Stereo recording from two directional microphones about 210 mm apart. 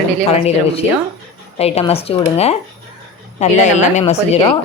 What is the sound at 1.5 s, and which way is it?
A woman's voice, 30° left (ahead or behind).